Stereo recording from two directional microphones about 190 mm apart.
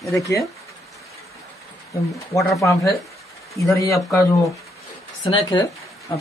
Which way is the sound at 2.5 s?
15° left (ahead or behind).